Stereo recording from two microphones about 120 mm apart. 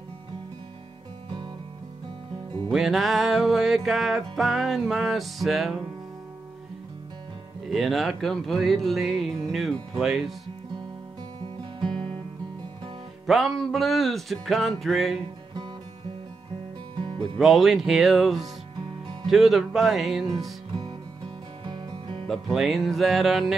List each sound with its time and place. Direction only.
2.7 s music: centre (ahead or behind)
7.6 s music: centre (ahead or behind)
13.3 s music: centre (ahead or behind)
17.4 s music: centre (ahead or behind)
21.6 s music: 40° right (ahead or behind)
22.3 s music: centre (ahead or behind)